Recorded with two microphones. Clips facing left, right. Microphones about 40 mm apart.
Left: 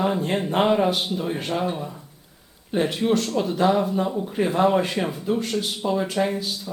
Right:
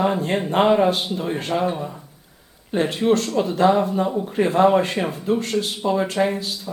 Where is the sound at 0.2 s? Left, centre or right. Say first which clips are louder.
Right 2 dB; centre.